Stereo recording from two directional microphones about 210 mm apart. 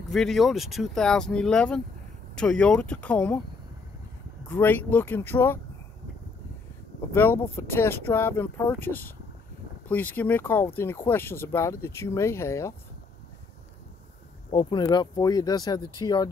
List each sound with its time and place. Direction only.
0.1 s speech: centre (ahead or behind)
4.5 s speech: 10° left (ahead or behind)
7.2 s speech: 10° left (ahead or behind)
14.5 s speech: 20° left (ahead or behind)